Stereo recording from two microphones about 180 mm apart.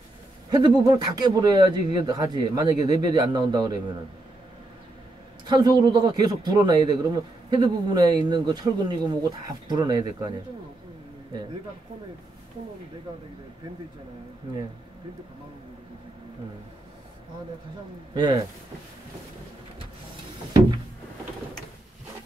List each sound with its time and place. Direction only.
0.5 s speech: 25° right (ahead or behind)
5.5 s speech: 20° right (ahead or behind)
18.1 s speech: 20° right (ahead or behind)